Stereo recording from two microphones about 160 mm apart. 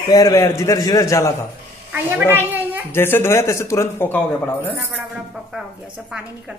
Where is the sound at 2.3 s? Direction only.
10° right (ahead or behind).